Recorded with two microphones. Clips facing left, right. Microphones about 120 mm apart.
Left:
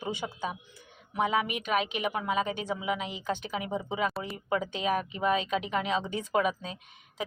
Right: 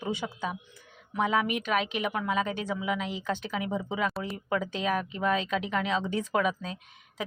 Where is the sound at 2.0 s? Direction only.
25° left (ahead or behind).